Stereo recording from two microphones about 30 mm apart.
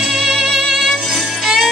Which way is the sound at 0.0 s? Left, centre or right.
Centre.